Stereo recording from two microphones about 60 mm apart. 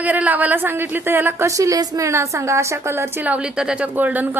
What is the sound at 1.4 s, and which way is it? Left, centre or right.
A woman's voice, right.